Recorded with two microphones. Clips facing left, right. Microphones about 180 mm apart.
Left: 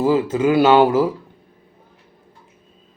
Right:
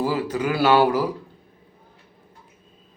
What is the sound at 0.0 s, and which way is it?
Speech, 25° left (ahead or behind).